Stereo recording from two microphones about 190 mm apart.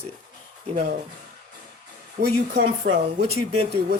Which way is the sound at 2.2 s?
40° right (ahead or behind).